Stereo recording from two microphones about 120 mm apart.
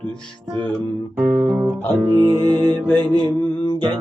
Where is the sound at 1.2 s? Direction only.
15° right (ahead or behind).